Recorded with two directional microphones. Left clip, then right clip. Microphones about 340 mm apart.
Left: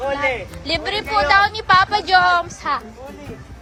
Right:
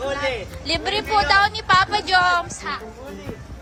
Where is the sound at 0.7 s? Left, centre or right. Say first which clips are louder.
Even; centre.